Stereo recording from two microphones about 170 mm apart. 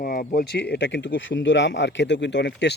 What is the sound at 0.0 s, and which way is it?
Speech, 55° left (ahead or behind).